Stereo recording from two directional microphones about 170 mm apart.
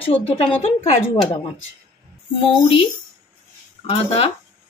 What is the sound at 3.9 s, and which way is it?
Speech, 35° left (ahead or behind).